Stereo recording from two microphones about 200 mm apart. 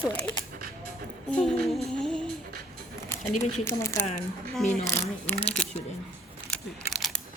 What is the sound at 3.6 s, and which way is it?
Speech, 15° left (ahead or behind).